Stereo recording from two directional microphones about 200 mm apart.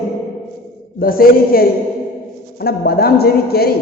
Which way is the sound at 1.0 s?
45° left (ahead or behind).